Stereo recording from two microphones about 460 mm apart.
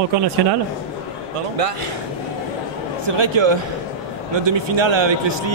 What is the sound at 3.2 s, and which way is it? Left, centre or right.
A man's voice, right.